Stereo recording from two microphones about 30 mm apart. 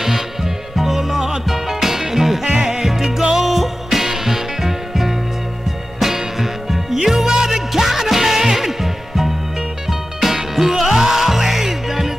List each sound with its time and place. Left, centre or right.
0.0 s music: centre
2.4 s music: right
2.8 s music: centre